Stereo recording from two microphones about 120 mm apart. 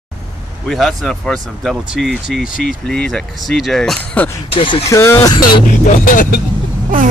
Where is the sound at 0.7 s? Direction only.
5° left (ahead or behind).